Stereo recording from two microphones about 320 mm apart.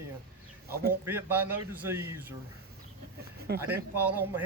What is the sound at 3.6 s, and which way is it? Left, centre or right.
Speech, centre.